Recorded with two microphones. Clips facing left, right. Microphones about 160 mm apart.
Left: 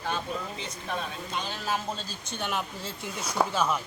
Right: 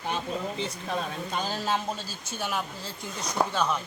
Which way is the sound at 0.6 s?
35° right (ahead or behind).